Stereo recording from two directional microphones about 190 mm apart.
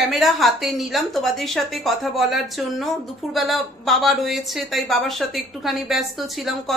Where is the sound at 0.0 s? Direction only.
Centre (ahead or behind).